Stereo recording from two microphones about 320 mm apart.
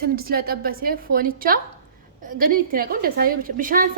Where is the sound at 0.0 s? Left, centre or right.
Right.